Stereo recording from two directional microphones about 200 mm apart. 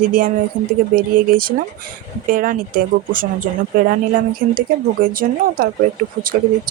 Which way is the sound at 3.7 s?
45° right (ahead or behind).